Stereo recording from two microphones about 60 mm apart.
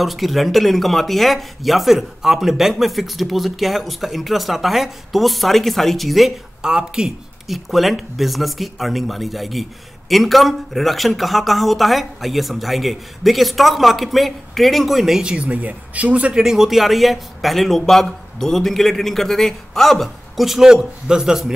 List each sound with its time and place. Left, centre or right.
0.0 s speech: centre
6.6 s speech: centre
7.4 s speech: centre
15.2 s speech: centre
16.3 s speech: centre